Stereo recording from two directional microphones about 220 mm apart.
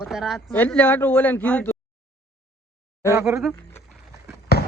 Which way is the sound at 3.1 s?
10° right (ahead or behind).